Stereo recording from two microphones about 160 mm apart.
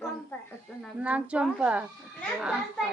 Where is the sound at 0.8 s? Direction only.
5° right (ahead or behind).